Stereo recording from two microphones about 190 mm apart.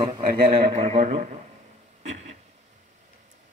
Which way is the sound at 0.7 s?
35° right (ahead or behind).